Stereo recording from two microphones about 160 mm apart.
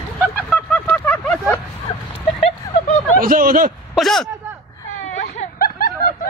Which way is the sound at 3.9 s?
Centre (ahead or behind).